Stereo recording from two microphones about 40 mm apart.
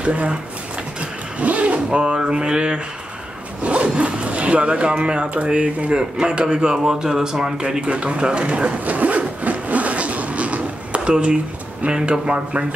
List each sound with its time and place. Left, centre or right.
0.0 s speech: right
1.4 s speech: right
1.9 s a man's voice: right
7.8 s speech: right
8.8 s vehicle: right
11.8 s speech: right